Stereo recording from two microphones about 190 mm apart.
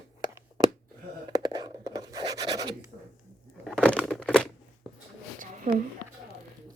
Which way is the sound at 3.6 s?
5° left (ahead or behind).